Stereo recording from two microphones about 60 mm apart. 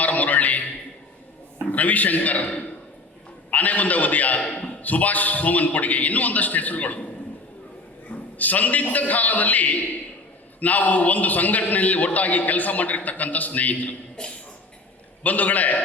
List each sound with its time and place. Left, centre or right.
0.0 s a sound: left
1.7 s a man's voice: left
8.4 s a man's voice: left
14.2 s speech: centre
15.2 s a man's voice: left